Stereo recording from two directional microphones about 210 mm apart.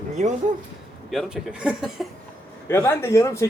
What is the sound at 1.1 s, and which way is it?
Speech, 5° right (ahead or behind).